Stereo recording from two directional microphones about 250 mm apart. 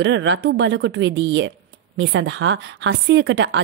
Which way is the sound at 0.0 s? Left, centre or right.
Right.